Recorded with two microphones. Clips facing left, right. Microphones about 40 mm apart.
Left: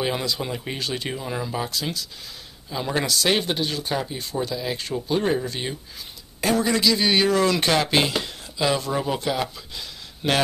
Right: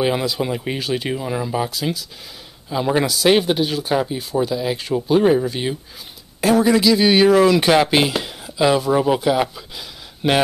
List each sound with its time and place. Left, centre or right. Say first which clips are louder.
0.0 s speech: right 6 dB; centre